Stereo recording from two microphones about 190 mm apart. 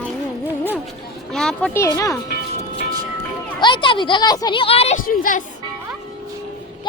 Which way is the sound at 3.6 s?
25° left (ahead or behind).